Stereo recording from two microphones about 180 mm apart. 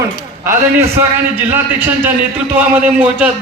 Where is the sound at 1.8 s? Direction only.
10° right (ahead or behind).